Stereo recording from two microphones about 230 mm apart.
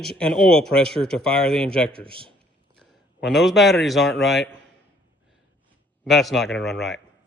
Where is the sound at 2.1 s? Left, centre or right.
Right.